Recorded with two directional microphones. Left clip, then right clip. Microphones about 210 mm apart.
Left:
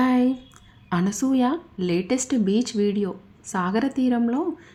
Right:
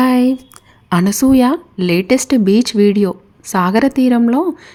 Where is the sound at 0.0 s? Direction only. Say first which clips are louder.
Right 8 dB; 30° right (ahead or behind).